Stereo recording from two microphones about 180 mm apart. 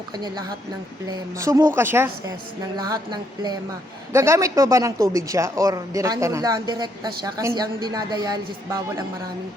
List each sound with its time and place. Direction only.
1.4 s speech: 15° right (ahead or behind)
2.7 s speech: 25° right (ahead or behind)